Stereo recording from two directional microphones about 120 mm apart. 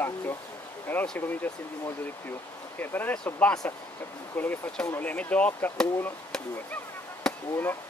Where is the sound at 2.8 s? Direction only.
15° left (ahead or behind).